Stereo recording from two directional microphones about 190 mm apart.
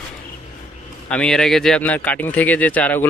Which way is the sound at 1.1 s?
5° left (ahead or behind).